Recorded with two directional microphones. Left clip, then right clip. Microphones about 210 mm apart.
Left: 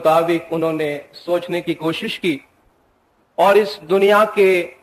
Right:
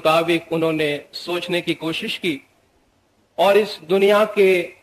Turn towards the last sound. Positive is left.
turn(degrees=-45)  # may be behind; listen again after turning